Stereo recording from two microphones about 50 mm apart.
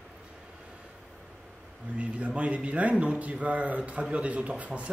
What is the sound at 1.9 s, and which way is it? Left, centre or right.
A man's voice, right.